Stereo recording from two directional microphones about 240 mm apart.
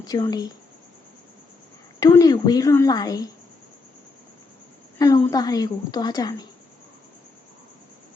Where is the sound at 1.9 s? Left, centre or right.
Centre.